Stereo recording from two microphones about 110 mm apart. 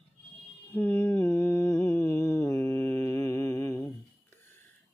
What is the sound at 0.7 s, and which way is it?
Mantra, 20° left (ahead or behind).